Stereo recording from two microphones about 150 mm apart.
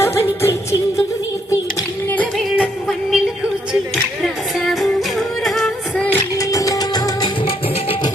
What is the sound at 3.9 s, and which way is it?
Music, centre (ahead or behind).